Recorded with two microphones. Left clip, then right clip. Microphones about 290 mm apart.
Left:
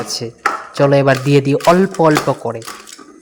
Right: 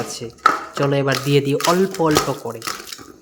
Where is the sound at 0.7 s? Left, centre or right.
Centre.